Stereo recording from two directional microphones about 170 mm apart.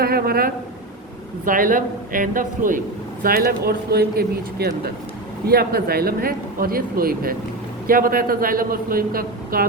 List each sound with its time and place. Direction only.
0.0 s speech: 65° right (ahead or behind)